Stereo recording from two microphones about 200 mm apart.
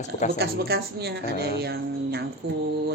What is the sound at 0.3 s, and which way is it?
A woman's voice, 55° right (ahead or behind).